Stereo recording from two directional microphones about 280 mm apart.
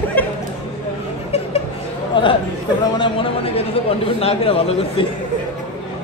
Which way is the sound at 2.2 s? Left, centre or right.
Centre.